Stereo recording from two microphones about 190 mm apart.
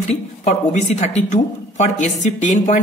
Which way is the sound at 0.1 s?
35° left (ahead or behind).